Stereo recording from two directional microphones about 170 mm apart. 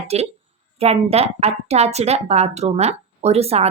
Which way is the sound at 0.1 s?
40° right (ahead or behind).